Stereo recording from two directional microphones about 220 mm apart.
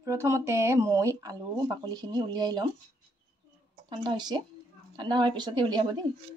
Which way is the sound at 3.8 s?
20° right (ahead or behind).